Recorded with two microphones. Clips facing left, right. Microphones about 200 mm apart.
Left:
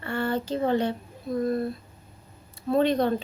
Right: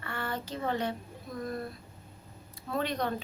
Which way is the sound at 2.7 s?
30° left (ahead or behind).